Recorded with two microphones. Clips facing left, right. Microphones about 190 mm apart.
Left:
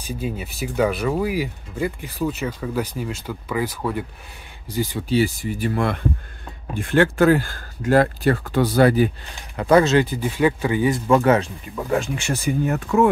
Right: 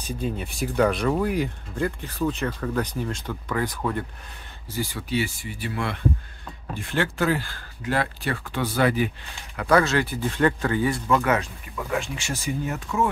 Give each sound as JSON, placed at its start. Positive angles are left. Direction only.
{"t": 0.0, "sound": "speech", "side_deg": 10}
{"t": 4.6, "sound": "speech", "side_deg": 20}
{"t": 5.1, "sound": "speech", "side_deg": 40}
{"t": 9.6, "sound": "speech", "side_deg": 25}
{"t": 10.3, "sound": "speech", "side_deg": 10}
{"t": 11.1, "sound": "speech", "side_deg": 30}
{"t": 12.0, "sound": "speech", "side_deg": 60}